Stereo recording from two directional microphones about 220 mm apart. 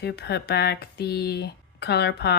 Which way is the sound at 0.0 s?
50° left (ahead or behind).